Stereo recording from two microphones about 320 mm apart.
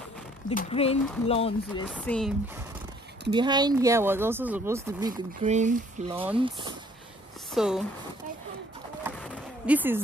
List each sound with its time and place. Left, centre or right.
0.5 s speech: centre
1.9 s speech: centre
3.3 s speech: centre
7.5 s speech: centre
9.0 s bee: centre